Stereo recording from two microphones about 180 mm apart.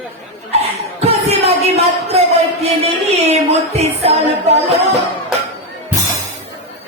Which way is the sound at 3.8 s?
35° right (ahead or behind).